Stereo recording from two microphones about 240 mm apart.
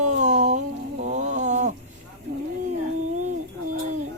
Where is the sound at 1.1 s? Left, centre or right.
Right.